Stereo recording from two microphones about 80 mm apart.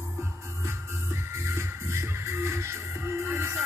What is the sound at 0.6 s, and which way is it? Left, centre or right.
Music, right.